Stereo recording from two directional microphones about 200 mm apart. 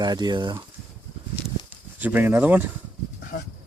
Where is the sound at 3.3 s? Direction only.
50° left (ahead or behind).